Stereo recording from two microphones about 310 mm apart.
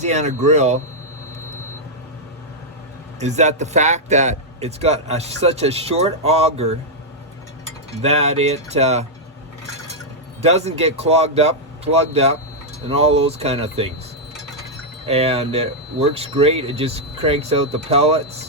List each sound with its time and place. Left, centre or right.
0.0 s speech: right
3.2 s speech: right
8.0 s speech: centre
10.4 s speech: right
15.0 s speech: centre